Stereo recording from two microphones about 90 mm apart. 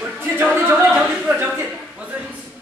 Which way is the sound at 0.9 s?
10° right (ahead or behind).